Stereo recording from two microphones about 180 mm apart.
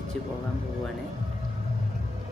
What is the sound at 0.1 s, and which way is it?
Speech, 5° left (ahead or behind).